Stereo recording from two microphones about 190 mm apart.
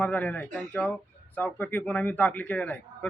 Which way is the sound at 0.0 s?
10° left (ahead or behind).